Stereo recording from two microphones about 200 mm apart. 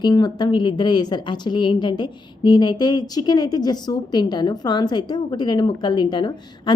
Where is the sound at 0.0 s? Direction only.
20° left (ahead or behind).